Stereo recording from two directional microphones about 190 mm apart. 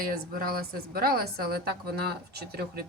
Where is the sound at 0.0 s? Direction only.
50° right (ahead or behind).